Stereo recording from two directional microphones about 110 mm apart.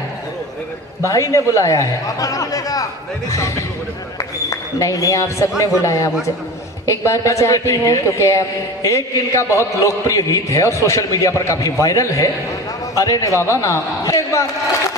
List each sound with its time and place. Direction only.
1.0 s a man's voice: 30° left (ahead or behind)